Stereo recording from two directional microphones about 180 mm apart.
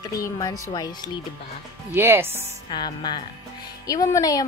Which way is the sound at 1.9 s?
10° right (ahead or behind).